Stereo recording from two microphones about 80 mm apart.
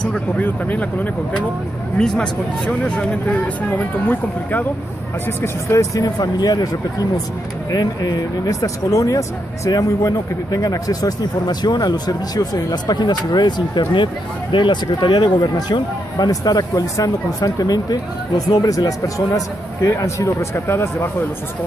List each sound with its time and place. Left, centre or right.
0.4 s speech: centre
5.2 s speech: left
15.3 s speech: left